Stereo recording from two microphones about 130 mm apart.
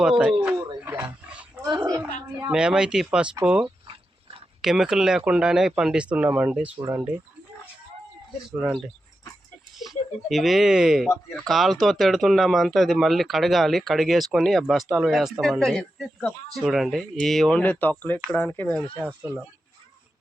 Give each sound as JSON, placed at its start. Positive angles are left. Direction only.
{"t": 0.0, "sound": "speech", "side_deg": -5}
{"t": 0.8, "sound": "dog", "side_deg": -15}
{"t": 1.6, "sound": "a woman's voice", "side_deg": -30}
{"t": 2.5, "sound": "speech", "side_deg": -5}
{"t": 3.8, "sound": "dog", "side_deg": -45}
{"t": 4.6, "sound": "speech", "side_deg": -5}
{"t": 8.4, "sound": "speech", "side_deg": -5}